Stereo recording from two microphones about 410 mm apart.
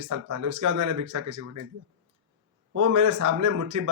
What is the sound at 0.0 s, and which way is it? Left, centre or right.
Speech, right.